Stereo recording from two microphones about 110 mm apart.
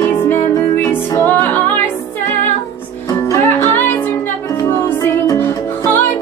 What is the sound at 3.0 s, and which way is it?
Music, 30° left (ahead or behind).